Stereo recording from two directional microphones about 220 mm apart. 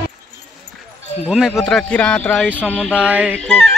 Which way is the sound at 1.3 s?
5° right (ahead or behind).